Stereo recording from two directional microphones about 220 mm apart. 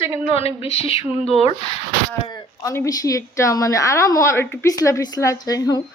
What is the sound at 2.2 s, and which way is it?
A woman's voice, 15° left (ahead or behind).